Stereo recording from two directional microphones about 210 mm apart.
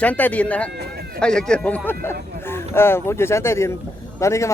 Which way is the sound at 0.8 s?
50° right (ahead or behind).